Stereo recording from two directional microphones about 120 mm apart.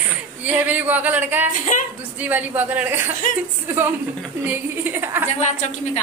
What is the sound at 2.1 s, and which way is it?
A woman's voice, 15° right (ahead or behind).